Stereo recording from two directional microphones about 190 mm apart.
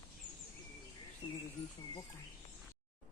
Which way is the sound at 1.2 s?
25° left (ahead or behind).